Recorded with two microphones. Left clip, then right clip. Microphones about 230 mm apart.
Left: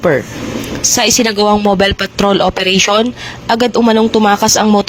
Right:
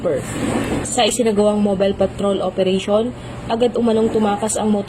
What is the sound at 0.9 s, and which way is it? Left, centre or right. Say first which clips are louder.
Speech: left 4 dB; left.